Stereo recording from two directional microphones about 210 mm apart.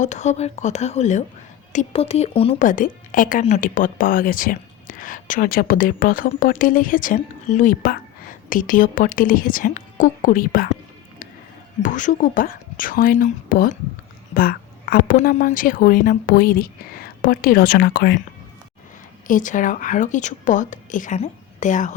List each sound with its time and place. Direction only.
0.0 s speech: 35° left (ahead or behind)
11.8 s a woman's voice: 40° left (ahead or behind)
19.3 s speech: 40° left (ahead or behind)